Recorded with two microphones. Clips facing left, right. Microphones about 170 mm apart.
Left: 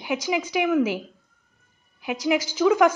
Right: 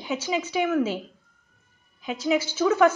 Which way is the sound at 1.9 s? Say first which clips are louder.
Left 2 dB; 80° left.